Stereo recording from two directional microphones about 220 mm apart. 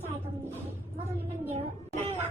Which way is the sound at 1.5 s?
25° right (ahead or behind).